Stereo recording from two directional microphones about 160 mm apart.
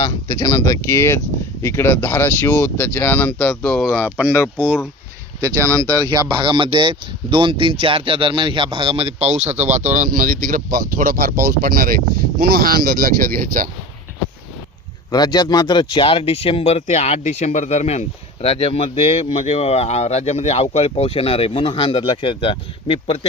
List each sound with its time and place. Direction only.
0.0 s speech: 30° left (ahead or behind); by 3.9 s 5° left (ahead or behind)
4.2 s speech: 10° right (ahead or behind)
5.5 s speech: 20° right (ahead or behind); by 13.7 s 60° right (ahead or behind)
15.1 s speech: 25° left (ahead or behind)